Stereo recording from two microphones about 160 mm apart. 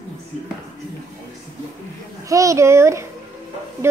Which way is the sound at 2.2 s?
20° right (ahead or behind).